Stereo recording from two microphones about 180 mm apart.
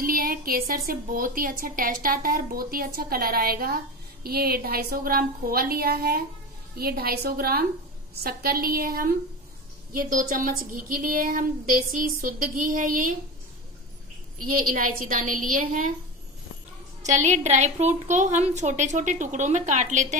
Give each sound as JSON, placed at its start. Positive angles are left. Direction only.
{"t": 0.0, "sound": "a woman's voice", "side_deg": -50}
{"t": 14.5, "sound": "a woman's voice", "side_deg": -50}
{"t": 17.0, "sound": "a woman's voice", "side_deg": -40}